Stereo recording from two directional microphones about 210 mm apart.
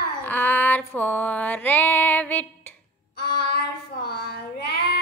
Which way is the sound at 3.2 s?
50° left (ahead or behind).